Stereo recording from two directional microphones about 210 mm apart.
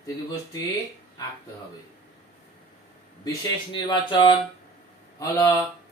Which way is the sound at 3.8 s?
20° left (ahead or behind).